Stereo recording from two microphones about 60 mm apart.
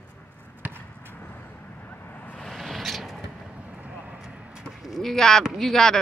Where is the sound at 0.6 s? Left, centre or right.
Right.